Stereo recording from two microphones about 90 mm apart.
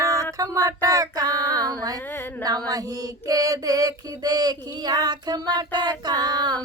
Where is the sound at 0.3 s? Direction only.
40° right (ahead or behind).